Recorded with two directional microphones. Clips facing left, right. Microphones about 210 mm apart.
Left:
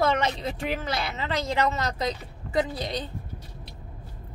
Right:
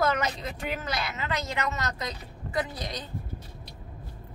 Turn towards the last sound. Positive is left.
turn(degrees=30)  # may be behind; listen again after turning